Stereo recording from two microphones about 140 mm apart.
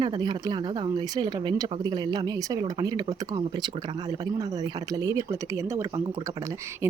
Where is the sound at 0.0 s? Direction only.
35° right (ahead or behind).